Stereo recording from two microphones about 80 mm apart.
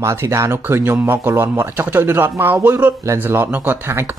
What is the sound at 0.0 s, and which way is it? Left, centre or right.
Speech, right.